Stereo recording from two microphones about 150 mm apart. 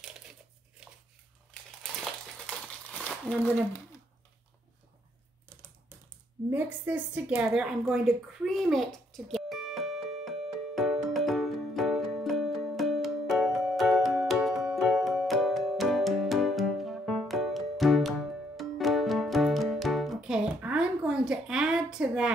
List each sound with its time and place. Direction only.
1.5 s crumpling: 5° left (ahead or behind)
3.3 s speech: 10° left (ahead or behind)
6.5 s a sound: 10° right (ahead or behind)
18.6 s music: centre (ahead or behind)